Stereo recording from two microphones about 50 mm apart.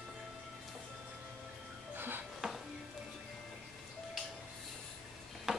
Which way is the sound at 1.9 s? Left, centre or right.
Right.